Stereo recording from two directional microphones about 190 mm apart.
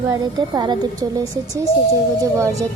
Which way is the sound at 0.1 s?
20° right (ahead or behind).